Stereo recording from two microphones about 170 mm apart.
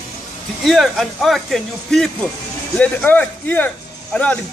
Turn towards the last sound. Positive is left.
turn(degrees=10)  # may be behind; listen again after turning